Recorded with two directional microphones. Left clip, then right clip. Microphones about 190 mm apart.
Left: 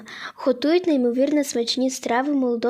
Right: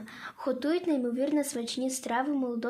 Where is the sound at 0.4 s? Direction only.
50° left (ahead or behind).